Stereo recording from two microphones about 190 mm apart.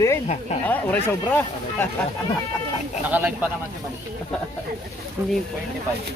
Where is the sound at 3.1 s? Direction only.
10° right (ahead or behind).